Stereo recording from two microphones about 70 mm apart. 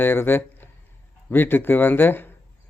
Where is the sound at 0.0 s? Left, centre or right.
Left.